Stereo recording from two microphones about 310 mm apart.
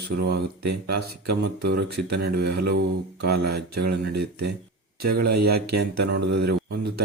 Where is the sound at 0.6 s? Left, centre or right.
Right.